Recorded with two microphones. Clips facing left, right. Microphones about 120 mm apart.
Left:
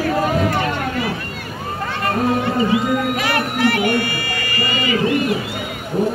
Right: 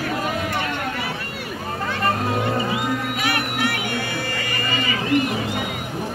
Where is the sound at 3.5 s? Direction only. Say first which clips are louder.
Left 7 dB; 50° left (ahead or behind).